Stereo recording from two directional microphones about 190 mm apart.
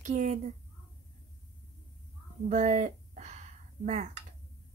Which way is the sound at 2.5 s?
40° right (ahead or behind).